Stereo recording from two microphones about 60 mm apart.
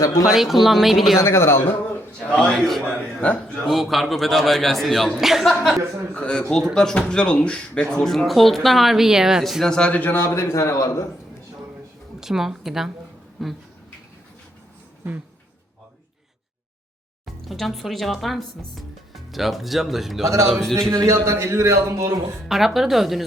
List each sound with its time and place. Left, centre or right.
0.0 s speech: left
0.3 s speech: centre
1.2 s a man's voice: left
2.3 s a man's voice: centre
2.8 s a man's voice: left
3.7 s speech: centre
6.1 s a man's voice: centre
9.6 s a man's voice: centre
10.2 s a man's voice: left
12.2 s speech: centre
17.2 s speech: centre
20.7 s a man's voice: centre
20.9 s a man's voice: right
22.4 s speech: centre